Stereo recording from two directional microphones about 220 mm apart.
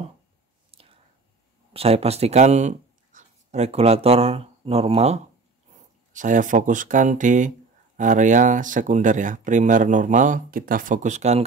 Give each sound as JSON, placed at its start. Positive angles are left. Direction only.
{"t": 0.7, "sound": "whispering", "side_deg": -25}
{"t": 1.7, "sound": "speech", "side_deg": -25}